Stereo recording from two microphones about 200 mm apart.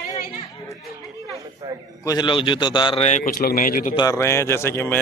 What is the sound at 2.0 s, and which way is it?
A man's voice, 20° left (ahead or behind).